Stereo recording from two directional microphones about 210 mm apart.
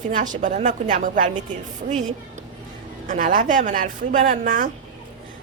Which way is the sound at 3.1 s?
40° right (ahead or behind).